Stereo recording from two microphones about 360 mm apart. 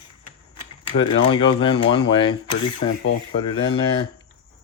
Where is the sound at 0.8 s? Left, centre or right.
Centre.